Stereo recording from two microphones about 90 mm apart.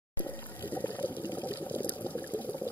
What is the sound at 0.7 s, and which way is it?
Water, 20° left (ahead or behind).